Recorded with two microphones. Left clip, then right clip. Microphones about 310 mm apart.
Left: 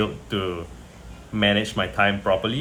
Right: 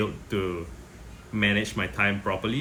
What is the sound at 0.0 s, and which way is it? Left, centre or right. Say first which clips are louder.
Speech: left 3 dB; centre.